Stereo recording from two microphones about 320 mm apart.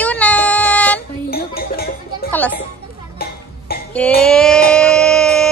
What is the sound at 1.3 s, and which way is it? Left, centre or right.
Music, left.